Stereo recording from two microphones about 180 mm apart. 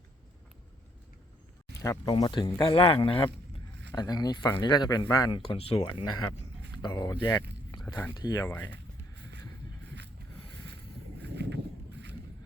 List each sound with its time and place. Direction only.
1.8 s speech: 20° left (ahead or behind)
5.5 s speech: 30° left (ahead or behind)
7.7 s biting: 25° left (ahead or behind)
8.1 s speech: 20° left (ahead or behind)
8.7 s a sound: 75° right (ahead or behind)
11.2 s a sound: 75° right (ahead or behind)